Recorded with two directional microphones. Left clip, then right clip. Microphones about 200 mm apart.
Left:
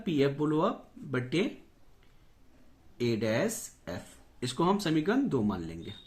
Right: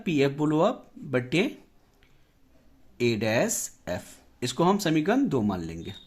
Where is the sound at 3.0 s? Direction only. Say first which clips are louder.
Right 5 dB; 40° right (ahead or behind).